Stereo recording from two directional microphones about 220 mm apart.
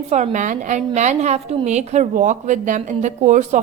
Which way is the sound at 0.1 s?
35° right (ahead or behind).